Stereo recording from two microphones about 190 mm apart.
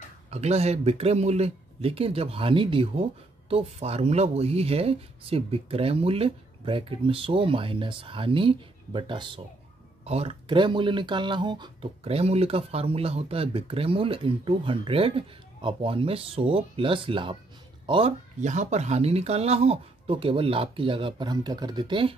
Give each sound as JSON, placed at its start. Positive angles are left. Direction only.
{"t": 0.3, "sound": "speech", "side_deg": -35}